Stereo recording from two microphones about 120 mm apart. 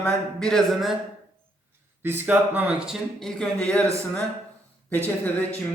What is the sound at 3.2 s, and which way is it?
Speech, 5° left (ahead or behind).